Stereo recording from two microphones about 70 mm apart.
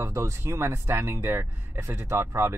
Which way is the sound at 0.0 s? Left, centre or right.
Right.